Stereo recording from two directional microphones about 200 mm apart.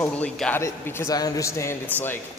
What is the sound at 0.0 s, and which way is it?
A man's voice, 5° left (ahead or behind).